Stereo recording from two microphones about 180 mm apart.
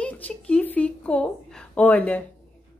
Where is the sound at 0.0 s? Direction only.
5° left (ahead or behind).